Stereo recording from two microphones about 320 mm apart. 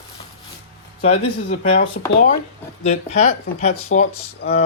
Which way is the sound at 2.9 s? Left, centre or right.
Left.